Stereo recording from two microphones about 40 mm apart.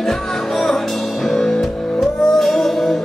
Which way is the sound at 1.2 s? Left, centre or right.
Centre.